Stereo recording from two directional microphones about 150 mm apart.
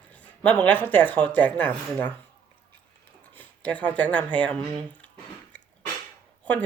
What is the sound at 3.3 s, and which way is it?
Speech, 10° left (ahead or behind).